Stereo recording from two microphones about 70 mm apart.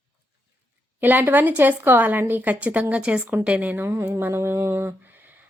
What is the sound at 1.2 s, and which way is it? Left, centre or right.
Speech, right.